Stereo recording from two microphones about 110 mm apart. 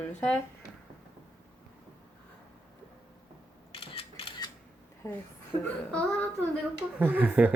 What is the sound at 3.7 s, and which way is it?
Mechanisms, 55° left (ahead or behind).